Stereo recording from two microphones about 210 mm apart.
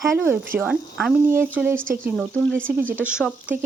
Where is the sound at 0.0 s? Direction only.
10° right (ahead or behind).